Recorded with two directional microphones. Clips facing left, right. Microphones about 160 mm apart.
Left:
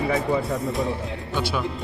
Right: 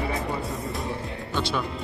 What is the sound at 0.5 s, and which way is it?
A man's voice, centre (ahead or behind).